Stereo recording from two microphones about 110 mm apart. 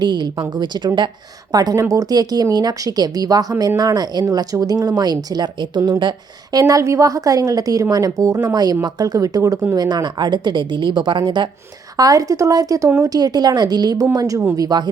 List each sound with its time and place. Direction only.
0.0 s a woman's voice: 40° right (ahead or behind)
11.9 s a woman's voice: 35° right (ahead or behind)